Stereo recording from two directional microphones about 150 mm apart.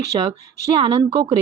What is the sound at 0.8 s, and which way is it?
Speech, 35° right (ahead or behind).